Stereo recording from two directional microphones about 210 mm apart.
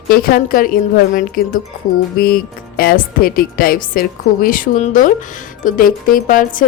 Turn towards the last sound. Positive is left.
turn(degrees=40)  # may be behind; listen again after turning